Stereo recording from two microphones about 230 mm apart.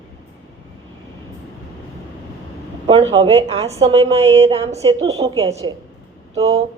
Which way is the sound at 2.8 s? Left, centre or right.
Right.